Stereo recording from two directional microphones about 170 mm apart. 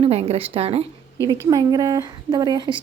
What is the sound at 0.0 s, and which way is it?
Speech, 35° right (ahead or behind).